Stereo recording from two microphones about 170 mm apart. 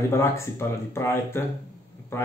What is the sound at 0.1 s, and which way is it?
Speech, 15° left (ahead or behind).